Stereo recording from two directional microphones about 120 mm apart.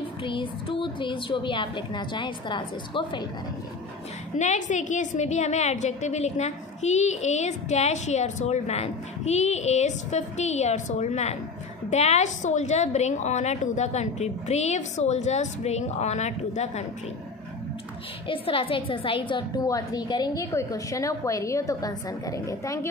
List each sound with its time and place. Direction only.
0.2 s a woman's voice: 45° left (ahead or behind)
4.4 s a woman's voice: 90° left; by 16.8 s 70° left (ahead or behind)
18.2 s a woman's voice: 45° left (ahead or behind); by 22.8 s 25° left (ahead or behind)